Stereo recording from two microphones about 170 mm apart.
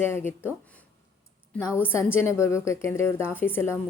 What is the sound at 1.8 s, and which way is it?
A woman's voice, 15° left (ahead or behind).